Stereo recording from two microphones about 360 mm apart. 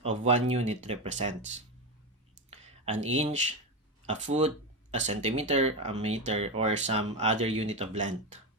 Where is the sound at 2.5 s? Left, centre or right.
Centre.